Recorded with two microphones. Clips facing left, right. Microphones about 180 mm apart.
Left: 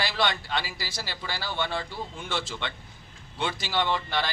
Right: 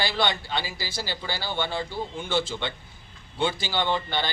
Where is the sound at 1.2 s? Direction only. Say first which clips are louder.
Even; 25° right (ahead or behind).